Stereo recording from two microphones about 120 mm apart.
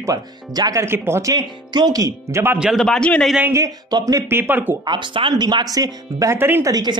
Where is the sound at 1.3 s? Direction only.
35° right (ahead or behind).